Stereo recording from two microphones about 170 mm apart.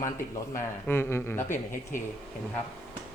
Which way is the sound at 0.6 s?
15° left (ahead or behind).